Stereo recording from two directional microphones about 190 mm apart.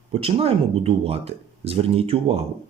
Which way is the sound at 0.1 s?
30° right (ahead or behind).